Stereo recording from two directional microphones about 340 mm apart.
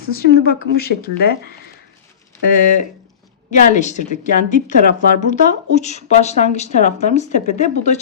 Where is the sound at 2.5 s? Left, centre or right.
Left.